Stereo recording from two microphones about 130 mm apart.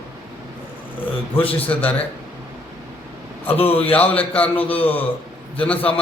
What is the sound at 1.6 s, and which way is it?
Speech, 10° left (ahead or behind).